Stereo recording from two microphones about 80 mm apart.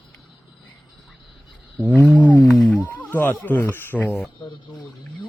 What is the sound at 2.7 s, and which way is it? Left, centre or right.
Speech, centre.